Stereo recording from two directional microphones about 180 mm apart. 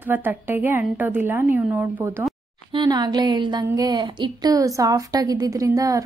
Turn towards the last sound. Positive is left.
turn(degrees=-20)  # may be behind; listen again after turning